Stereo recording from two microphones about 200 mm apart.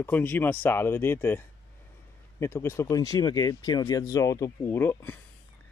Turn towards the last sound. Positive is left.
turn(degrees=10)  # may be behind; listen again after turning